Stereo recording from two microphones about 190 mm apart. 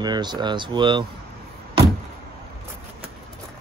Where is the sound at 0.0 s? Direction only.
20° right (ahead or behind).